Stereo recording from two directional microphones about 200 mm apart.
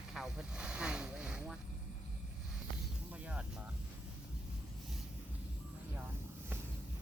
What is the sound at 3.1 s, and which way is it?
Snake, 5° right (ahead or behind).